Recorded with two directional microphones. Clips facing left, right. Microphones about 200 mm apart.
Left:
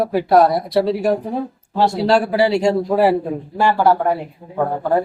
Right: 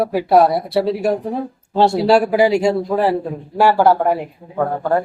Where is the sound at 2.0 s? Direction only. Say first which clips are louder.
Right 1 dB; 10° right (ahead or behind).